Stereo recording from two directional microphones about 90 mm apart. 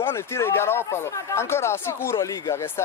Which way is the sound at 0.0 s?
30° left (ahead or behind).